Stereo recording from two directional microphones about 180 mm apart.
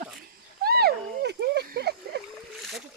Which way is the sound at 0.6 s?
60° right (ahead or behind).